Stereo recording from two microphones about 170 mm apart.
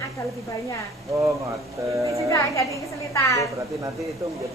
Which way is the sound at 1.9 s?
15° right (ahead or behind).